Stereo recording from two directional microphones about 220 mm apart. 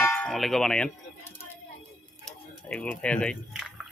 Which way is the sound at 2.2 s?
5° left (ahead or behind).